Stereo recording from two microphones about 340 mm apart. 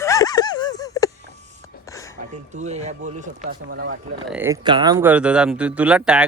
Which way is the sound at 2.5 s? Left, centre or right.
Centre.